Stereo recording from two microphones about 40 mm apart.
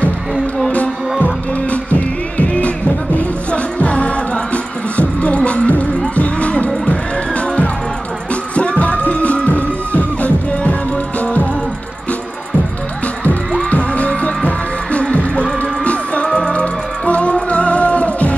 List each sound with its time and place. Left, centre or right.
1.7 s music: left
8.5 s music: left
13.6 s heart sounds: left
16.3 s music: left